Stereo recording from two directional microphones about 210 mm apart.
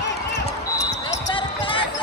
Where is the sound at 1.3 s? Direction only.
25° left (ahead or behind).